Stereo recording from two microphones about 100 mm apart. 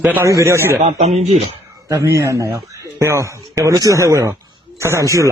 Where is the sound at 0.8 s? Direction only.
90° right.